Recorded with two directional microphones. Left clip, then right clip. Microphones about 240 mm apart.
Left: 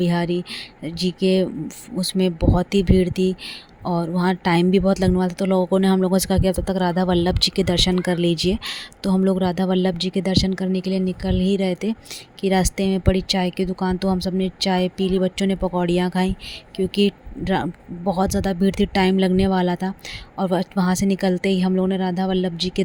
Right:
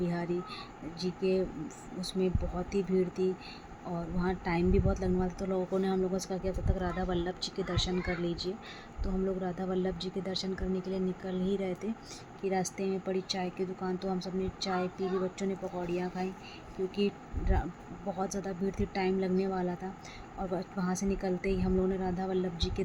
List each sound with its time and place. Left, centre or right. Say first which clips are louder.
0.0 s speech: left 12 dB; left